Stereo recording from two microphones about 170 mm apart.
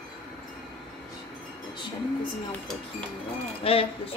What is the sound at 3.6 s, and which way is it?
Speech, 35° left (ahead or behind).